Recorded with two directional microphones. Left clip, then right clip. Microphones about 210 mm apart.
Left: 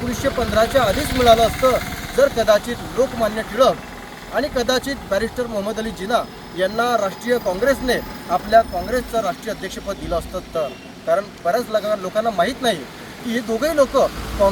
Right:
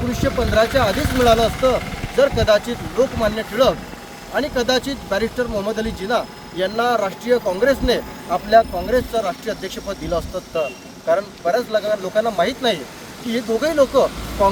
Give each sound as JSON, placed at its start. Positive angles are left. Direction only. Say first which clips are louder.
{"t": 0.1, "sound": "speech", "louder": "even", "side_deg": -10}
{"t": 0.9, "sound": "speech", "louder": "right 1 dB", "side_deg": -35}
{"t": 1.6, "sound": "speech", "louder": "left 1 dB", "side_deg": -5}